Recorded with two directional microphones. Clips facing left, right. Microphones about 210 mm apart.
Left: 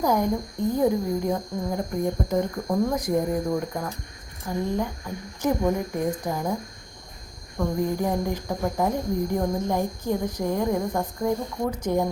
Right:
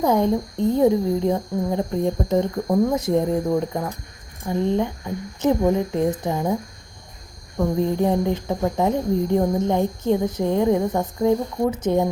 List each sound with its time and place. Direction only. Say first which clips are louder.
0.0 s cricket: right 4 dB; 25° right (ahead or behind)
4.4 s cricket: right 5 dB; 25° right (ahead or behind)
7.8 s cricket: right 5 dB; 25° right (ahead or behind)